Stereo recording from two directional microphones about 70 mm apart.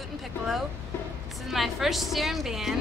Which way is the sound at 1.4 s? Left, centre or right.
Centre.